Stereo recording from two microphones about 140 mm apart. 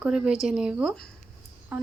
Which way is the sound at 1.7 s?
10° right (ahead or behind).